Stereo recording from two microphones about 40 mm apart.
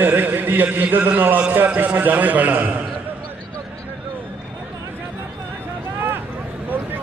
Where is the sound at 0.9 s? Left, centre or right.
Right.